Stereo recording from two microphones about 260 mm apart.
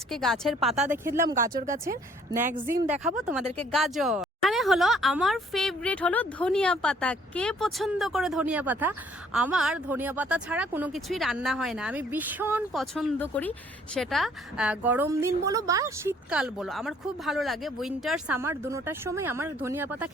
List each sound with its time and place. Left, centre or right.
0.1 s speech: centre
2.9 s speech: centre